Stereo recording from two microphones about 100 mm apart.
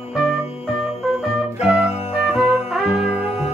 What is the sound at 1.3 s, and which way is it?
Music, 5° right (ahead or behind).